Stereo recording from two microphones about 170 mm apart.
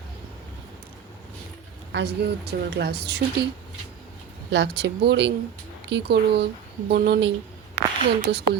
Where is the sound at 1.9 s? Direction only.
80° right.